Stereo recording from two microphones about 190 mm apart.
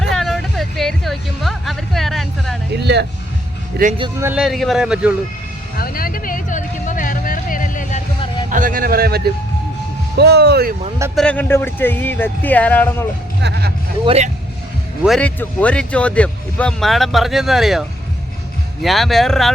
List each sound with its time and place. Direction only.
0.1 s music: centre (ahead or behind)
2.7 s speech: 65° right (ahead or behind)
4.2 s speech: 5° right (ahead or behind)
5.7 s music: 50° left (ahead or behind)
8.4 s speech: 45° right (ahead or behind)
11.1 s speech: 5° left (ahead or behind)
13.4 s speech: 60° right (ahead or behind)
14.0 s speech: 30° right (ahead or behind)
15.0 s speech: centre (ahead or behind)